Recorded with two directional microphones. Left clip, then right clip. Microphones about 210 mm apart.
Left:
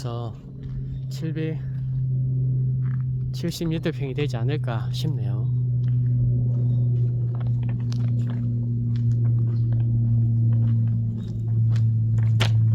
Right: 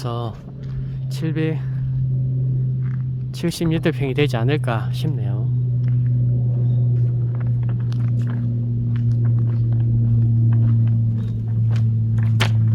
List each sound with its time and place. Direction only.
1.2 s speech: 15° right (ahead or behind)
3.4 s speech: 15° right (ahead or behind)
12.4 s walk: 10° right (ahead or behind)